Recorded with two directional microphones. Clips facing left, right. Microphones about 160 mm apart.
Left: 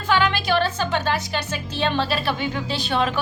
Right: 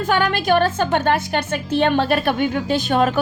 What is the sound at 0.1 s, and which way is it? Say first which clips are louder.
A woman's voice: right 2 dB; 50° right (ahead or behind).